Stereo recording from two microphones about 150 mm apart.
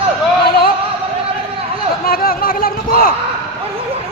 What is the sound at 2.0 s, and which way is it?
A man's voice, 75° left (ahead or behind).